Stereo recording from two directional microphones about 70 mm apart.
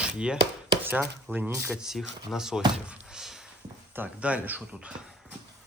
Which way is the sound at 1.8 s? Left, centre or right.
Centre.